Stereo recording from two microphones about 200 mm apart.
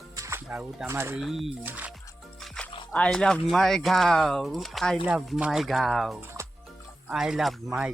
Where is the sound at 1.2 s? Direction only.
Centre (ahead or behind).